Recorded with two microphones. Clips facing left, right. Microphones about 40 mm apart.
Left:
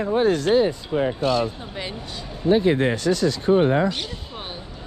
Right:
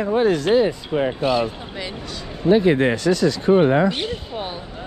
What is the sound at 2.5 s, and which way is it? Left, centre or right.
Speech, right.